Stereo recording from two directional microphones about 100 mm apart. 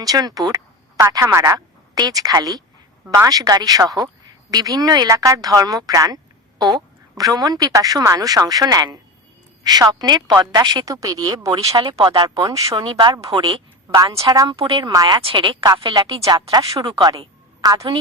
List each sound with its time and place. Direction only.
0.0 s speech: 40° right (ahead or behind)
0.9 s speech: 30° right (ahead or behind)
2.0 s a woman's voice: 40° right (ahead or behind)
11.8 s speech: 55° right (ahead or behind)
12.2 s speech: 40° right (ahead or behind)
12.7 s a woman's voice: 50° right (ahead or behind)
13.9 s speech: 40° right (ahead or behind)
14.5 s a woman's voice: 60° right (ahead or behind)
15.2 s speech: 60° right (ahead or behind)
15.6 s a woman's voice: 45° right (ahead or behind)
16.2 s speech: 40° right (ahead or behind)